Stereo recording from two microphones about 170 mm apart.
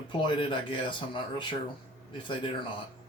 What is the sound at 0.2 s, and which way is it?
Speech, 30° left (ahead or behind).